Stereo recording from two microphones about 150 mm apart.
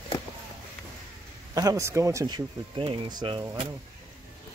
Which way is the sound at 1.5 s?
20° right (ahead or behind).